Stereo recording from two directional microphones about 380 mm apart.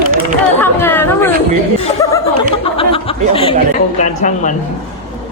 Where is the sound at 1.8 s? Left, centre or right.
Centre.